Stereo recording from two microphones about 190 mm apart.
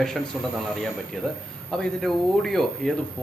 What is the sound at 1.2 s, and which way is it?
Speech, 5° left (ahead or behind).